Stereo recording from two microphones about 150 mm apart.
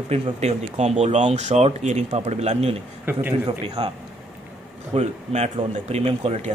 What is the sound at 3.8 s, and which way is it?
Speech, 35° right (ahead or behind).